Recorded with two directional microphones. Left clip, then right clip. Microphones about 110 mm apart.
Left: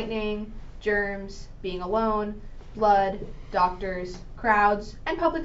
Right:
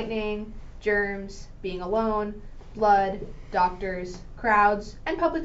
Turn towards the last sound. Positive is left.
turn(degrees=-35)  # may be behind; listen again after turning